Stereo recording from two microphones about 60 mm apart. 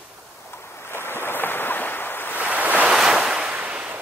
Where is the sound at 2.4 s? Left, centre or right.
Right.